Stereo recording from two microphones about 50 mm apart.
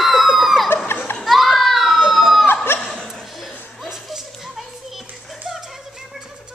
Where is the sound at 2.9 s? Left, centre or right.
Centre.